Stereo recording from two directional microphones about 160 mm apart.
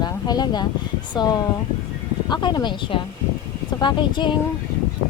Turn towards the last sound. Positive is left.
turn(degrees=30)  # may be behind; listen again after turning